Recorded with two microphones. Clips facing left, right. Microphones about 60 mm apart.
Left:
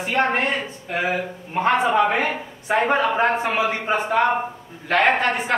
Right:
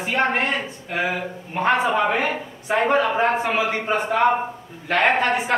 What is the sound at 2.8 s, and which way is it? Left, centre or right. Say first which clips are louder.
Speech: right 1 dB; centre.